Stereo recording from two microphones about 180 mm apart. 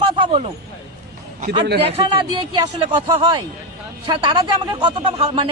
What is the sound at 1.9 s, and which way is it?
Speech, 30° right (ahead or behind).